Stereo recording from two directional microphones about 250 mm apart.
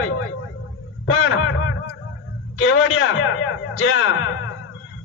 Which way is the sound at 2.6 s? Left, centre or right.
Left.